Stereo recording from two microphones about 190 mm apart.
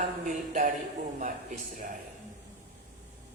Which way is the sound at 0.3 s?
45° right (ahead or behind).